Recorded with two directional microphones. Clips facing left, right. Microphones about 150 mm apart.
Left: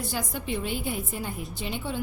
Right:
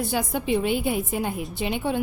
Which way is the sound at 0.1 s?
60° right (ahead or behind).